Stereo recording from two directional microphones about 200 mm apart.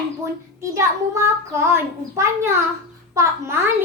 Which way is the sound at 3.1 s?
15° right (ahead or behind).